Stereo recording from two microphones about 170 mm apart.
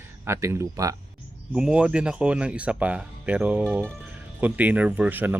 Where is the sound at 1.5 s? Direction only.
5° right (ahead or behind).